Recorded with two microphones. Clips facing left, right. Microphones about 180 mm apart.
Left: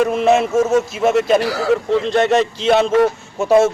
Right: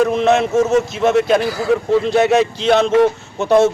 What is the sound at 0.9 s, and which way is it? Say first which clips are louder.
Speech: even; 5° left (ahead or behind).